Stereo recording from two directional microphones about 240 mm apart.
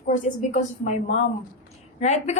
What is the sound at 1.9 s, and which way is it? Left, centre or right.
Speech, left.